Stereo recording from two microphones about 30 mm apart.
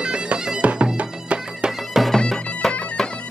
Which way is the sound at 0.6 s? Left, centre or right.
Right.